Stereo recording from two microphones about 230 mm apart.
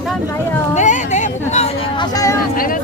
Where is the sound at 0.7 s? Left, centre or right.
Left.